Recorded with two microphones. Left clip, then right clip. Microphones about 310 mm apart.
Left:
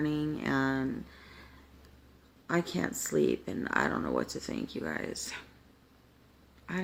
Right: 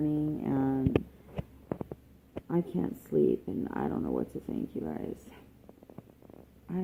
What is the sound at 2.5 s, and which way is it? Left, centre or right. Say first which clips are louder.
Speech: left 2 dB; left.